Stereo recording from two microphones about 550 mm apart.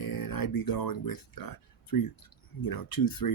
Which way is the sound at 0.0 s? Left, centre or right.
Left.